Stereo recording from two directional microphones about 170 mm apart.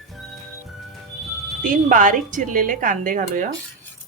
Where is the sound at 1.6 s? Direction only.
50° right (ahead or behind).